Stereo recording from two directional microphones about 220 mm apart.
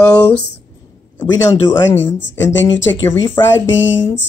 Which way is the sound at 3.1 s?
10° left (ahead or behind).